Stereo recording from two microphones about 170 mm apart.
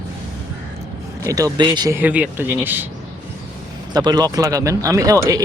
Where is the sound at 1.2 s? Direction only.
20° right (ahead or behind).